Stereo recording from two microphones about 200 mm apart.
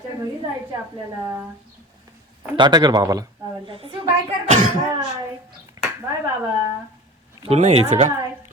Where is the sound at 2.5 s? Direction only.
20° right (ahead or behind).